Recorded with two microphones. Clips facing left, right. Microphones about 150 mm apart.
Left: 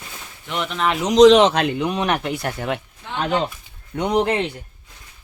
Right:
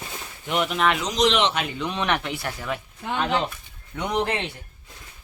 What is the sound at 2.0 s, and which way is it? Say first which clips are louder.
Speech: left 4 dB; 40° left (ahead or behind).